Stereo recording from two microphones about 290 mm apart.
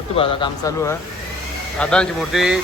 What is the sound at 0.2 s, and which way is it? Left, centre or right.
Speech, centre.